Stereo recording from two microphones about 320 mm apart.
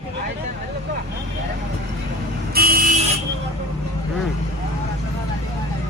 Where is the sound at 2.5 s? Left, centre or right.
Right.